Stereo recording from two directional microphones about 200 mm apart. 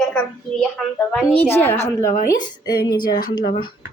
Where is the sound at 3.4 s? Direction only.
50° left (ahead or behind).